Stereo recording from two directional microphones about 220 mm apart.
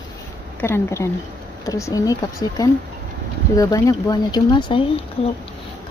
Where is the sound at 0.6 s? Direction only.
10° left (ahead or behind).